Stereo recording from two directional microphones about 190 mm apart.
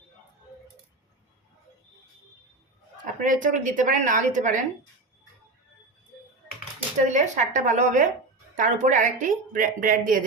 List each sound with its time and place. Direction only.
3.2 s speech: 45° right (ahead or behind)
7.0 s a woman's voice: 40° right (ahead or behind)